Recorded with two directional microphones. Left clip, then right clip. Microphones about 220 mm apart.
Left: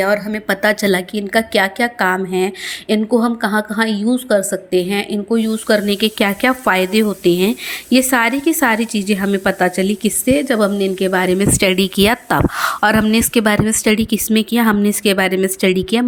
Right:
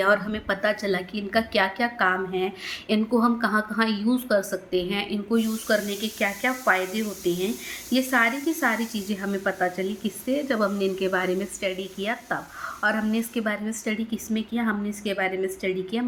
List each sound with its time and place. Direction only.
0.0 s a woman's voice: 20° left (ahead or behind); by 16.0 s 45° left (ahead or behind)